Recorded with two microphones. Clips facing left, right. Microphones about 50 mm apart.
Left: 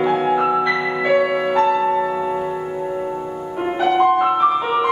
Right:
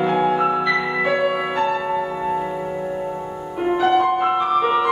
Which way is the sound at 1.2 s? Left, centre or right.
Centre.